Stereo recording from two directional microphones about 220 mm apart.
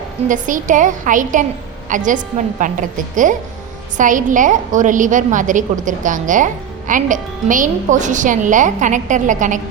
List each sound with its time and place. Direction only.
0.3 s a woman's voice: 35° right (ahead or behind)
3.9 s a woman's voice: 35° right (ahead or behind)